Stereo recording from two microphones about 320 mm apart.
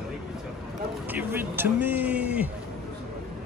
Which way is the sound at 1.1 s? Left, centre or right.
Centre.